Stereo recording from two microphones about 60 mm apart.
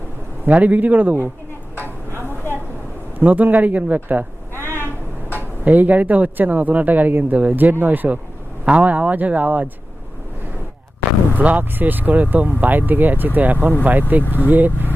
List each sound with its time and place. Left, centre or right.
0.4 s speech: right
3.2 s speech: right
4.5 s a sound: left
5.6 s speech: right
11.3 s speech: right